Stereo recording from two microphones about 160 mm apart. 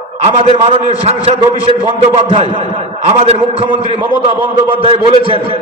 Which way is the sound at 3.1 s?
40° right (ahead or behind).